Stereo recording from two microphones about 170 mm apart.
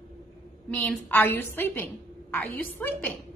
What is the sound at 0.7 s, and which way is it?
A woman's voice, 15° left (ahead or behind).